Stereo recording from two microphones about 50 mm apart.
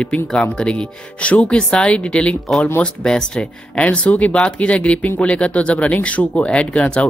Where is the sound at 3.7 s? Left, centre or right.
Left.